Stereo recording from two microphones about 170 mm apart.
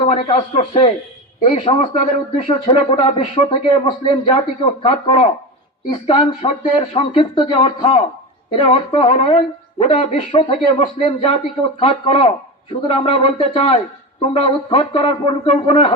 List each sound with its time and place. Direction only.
0.0 s speech: 40° left (ahead or behind)